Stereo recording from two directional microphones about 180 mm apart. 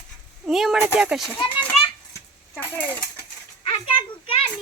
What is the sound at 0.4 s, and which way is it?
Speech, centre (ahead or behind).